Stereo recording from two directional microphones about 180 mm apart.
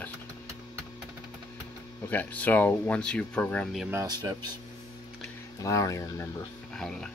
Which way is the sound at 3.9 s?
20° right (ahead or behind).